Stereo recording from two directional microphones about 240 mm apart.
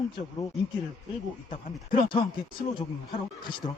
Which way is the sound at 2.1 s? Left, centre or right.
Centre.